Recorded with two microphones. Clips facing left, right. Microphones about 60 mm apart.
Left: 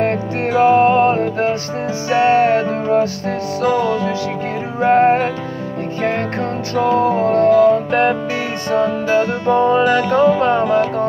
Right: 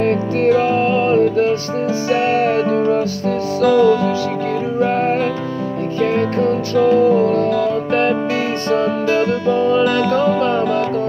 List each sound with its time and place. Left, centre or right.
0.5 s music: left
9.5 s music: left